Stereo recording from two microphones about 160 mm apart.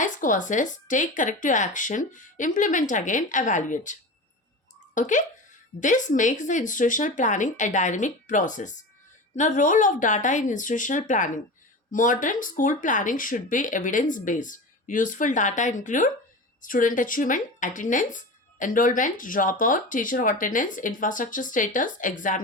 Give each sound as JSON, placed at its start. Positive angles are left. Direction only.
{"t": 0.0, "sound": "speech", "side_deg": 55}
{"t": 4.9, "sound": "speech", "side_deg": 50}